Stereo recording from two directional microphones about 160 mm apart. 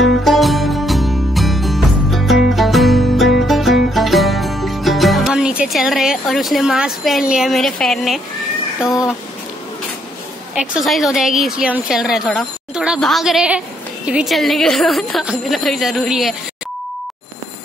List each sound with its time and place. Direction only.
0.0 s music: centre (ahead or behind)
10.9 s a woman's voice: centre (ahead or behind)